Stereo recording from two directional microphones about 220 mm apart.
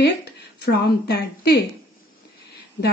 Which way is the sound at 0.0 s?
50° left (ahead or behind).